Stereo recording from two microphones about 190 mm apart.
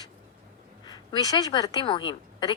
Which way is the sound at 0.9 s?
20° left (ahead or behind).